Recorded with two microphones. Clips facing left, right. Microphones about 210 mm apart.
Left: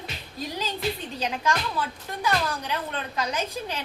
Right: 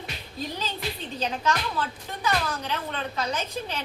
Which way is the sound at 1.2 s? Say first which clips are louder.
Right 2 dB; 10° left (ahead or behind).